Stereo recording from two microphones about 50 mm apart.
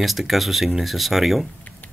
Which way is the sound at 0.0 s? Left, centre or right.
Centre.